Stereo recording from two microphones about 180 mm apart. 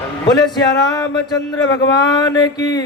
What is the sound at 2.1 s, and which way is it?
Speech, 20° left (ahead or behind).